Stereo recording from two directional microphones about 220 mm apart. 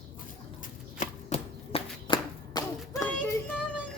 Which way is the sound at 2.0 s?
20° left (ahead or behind).